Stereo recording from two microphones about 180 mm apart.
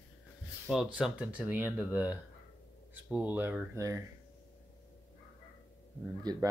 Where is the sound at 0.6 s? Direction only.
Centre (ahead or behind).